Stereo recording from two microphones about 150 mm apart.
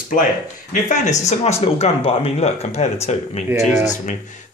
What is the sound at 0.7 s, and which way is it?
Speech, 55° left (ahead or behind).